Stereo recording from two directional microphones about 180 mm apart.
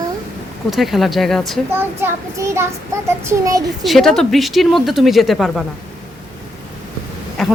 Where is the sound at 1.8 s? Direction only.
15° right (ahead or behind).